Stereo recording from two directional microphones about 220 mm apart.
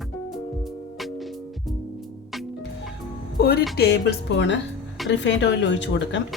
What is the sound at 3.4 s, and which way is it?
Speech, 45° left (ahead or behind).